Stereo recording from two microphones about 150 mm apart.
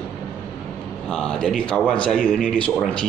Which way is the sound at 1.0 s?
5° left (ahead or behind).